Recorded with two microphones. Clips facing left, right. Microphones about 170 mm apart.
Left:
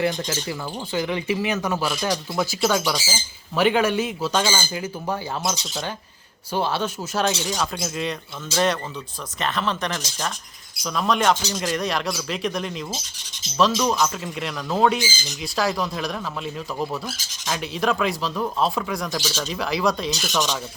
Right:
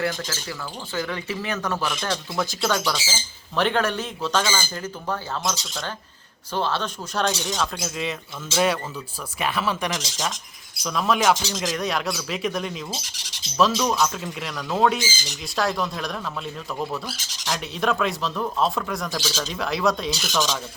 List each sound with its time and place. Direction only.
0.0 s speech: 20° left (ahead or behind); by 12.8 s centre (ahead or behind)
13.1 s filing: 75° right (ahead or behind)
13.6 s speech: centre (ahead or behind)